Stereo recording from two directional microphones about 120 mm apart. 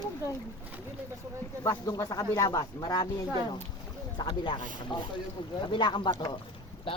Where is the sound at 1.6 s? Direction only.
30° left (ahead or behind).